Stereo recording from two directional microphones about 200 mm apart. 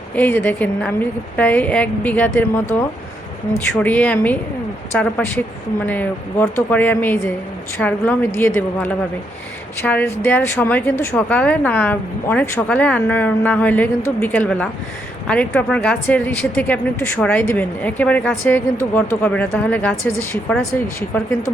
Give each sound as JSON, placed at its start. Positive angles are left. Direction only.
{"t": 0.1, "sound": "speech", "side_deg": 10}